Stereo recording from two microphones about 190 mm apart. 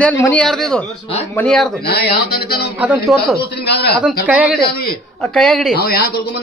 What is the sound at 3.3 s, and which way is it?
Speech, 60° left (ahead or behind).